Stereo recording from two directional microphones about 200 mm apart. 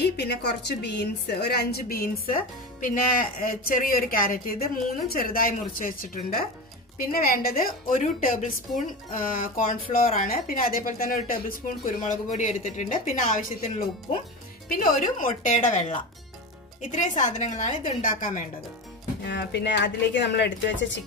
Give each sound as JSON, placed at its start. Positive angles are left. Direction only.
{"t": 0.0, "sound": "a woman's voice", "side_deg": 55}
{"t": 14.7, "sound": "a woman's voice", "side_deg": 45}
{"t": 19.2, "sound": "a woman's voice", "side_deg": 60}